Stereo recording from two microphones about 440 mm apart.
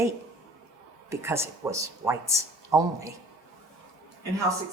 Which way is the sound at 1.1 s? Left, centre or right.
Centre.